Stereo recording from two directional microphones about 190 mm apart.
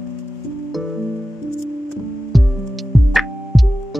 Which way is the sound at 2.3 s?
Centre (ahead or behind).